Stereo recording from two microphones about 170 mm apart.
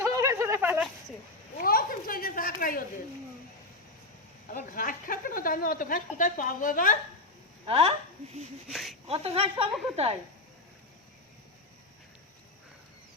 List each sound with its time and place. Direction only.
0.0 s a sound: 20° right (ahead or behind)
1.5 s a sound: 60° left (ahead or behind)
4.4 s a woman's voice: 55° left (ahead or behind)
7.7 s speech: 35° right (ahead or behind)
8.7 s speech: centre (ahead or behind)
9.0 s speech: 35° right (ahead or behind)